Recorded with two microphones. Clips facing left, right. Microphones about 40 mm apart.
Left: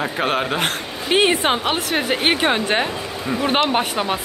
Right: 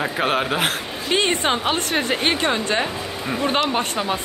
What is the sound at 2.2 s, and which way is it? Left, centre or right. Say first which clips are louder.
Speech: left 2 dB; left.